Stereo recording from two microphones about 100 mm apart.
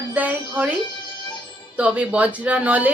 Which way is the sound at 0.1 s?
15° right (ahead or behind).